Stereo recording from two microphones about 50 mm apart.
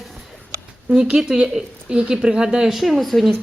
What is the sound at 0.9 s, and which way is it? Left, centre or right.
Speech, centre.